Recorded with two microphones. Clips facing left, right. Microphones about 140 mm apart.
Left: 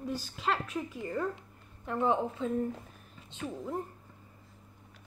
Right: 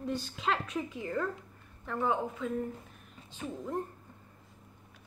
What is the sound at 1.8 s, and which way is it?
Speech, 20° left (ahead or behind).